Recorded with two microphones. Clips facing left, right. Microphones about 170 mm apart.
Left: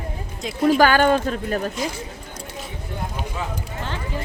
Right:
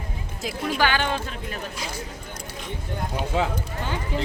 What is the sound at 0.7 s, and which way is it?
Speech, 45° left (ahead or behind).